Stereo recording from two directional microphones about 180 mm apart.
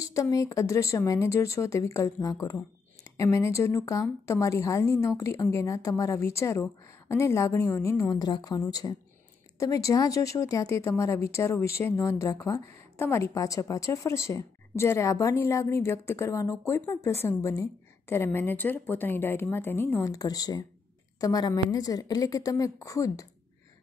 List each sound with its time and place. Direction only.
0.0 s a woman's voice: 20° left (ahead or behind)